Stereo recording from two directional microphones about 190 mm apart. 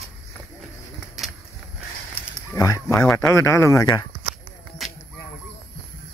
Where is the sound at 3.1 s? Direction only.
15° left (ahead or behind).